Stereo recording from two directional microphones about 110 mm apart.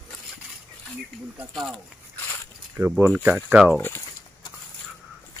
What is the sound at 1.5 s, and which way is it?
Speech, 5° left (ahead or behind).